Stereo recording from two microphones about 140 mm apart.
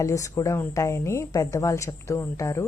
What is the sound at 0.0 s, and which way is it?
Speech, 20° left (ahead or behind).